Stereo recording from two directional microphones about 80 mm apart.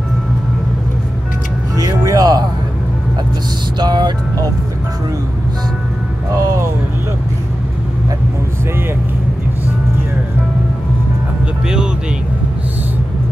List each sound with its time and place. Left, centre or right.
1.8 s music: right
3.8 s music: right
6.3 s music: right
11.6 s vehicle: centre